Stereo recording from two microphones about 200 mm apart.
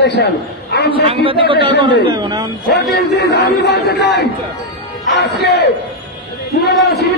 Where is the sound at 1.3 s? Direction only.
25° right (ahead or behind).